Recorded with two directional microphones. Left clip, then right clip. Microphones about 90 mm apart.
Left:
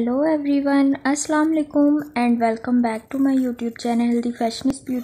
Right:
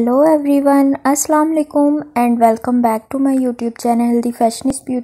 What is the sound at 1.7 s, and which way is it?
Speech, 10° left (ahead or behind).